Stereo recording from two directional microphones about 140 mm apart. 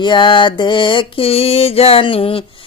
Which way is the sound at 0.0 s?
35° left (ahead or behind).